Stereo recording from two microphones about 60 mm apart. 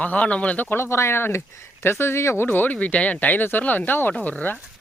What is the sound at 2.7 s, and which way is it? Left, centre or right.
Speech, left.